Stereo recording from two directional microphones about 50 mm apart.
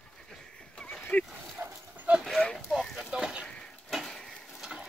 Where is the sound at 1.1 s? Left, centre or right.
Left.